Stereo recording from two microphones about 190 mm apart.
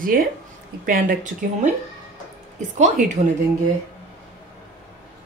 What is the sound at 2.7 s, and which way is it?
Speech, 40° right (ahead or behind).